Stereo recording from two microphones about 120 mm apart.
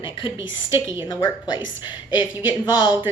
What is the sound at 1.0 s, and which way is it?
A woman's voice, 35° left (ahead or behind).